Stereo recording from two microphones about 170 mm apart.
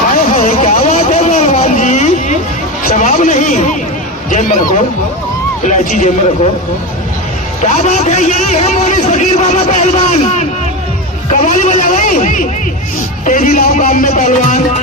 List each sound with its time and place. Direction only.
0.3 s vehicle: 40° left (ahead or behind)
2.8 s a sound: 45° left (ahead or behind)
4.3 s a man's voice: 50° left (ahead or behind)
7.6 s a man's voice: 45° left (ahead or behind)